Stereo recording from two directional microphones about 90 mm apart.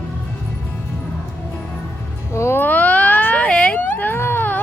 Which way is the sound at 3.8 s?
20° left (ahead or behind).